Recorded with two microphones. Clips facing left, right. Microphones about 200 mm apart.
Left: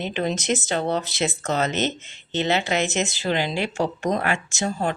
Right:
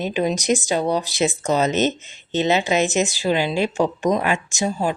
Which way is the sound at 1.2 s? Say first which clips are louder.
Right 4 dB; 20° right (ahead or behind).